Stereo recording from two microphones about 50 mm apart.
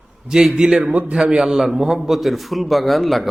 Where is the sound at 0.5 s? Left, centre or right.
Centre.